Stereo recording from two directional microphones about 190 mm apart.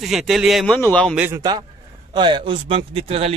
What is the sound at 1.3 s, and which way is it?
Speech, 20° right (ahead or behind).